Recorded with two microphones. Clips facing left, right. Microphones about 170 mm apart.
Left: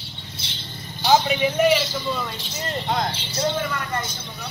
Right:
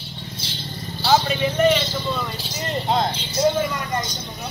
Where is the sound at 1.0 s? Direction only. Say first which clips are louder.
Left 1 dB; 15° left (ahead or behind).